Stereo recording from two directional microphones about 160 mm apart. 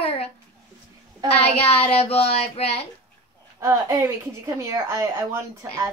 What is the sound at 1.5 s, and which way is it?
Speech, 40° left (ahead or behind).